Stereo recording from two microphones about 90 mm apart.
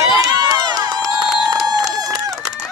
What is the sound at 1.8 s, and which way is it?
Run, 45° right (ahead or behind).